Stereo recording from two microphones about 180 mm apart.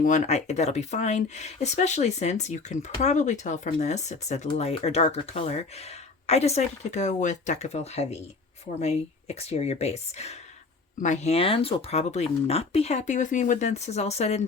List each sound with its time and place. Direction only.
0.0 s speech: 40° left (ahead or behind)